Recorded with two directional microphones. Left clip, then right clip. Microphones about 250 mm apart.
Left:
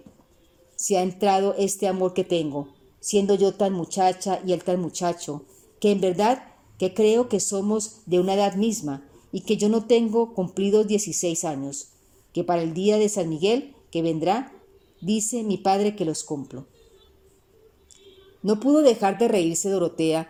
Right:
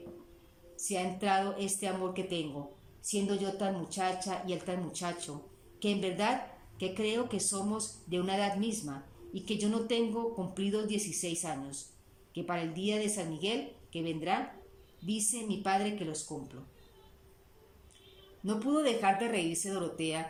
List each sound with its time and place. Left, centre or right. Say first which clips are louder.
0.8 s speech: left 13 dB; left
18.4 s speech: left 13 dB; left